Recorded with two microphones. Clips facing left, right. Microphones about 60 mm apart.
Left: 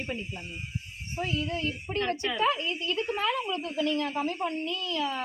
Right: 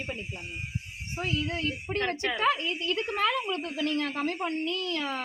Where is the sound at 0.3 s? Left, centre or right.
Centre.